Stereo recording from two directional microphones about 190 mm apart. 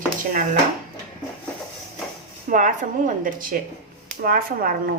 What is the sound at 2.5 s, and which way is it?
A woman's voice, 40° right (ahead or behind).